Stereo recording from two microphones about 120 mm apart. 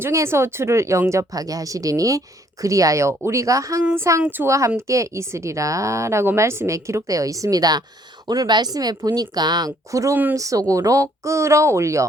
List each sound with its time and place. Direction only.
0.0 s speech: 20° right (ahead or behind)